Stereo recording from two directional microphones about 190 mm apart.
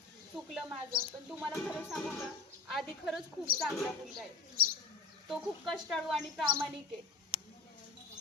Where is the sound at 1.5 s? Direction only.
10° left (ahead or behind).